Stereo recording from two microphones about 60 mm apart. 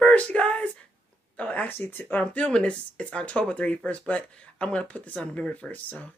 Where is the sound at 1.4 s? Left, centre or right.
Left.